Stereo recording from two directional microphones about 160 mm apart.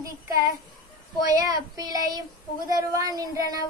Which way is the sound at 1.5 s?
25° right (ahead or behind).